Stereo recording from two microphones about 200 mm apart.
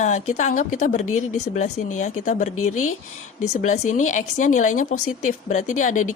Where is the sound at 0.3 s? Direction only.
40° left (ahead or behind).